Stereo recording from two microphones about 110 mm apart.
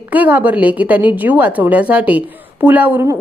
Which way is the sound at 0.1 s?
15° right (ahead or behind).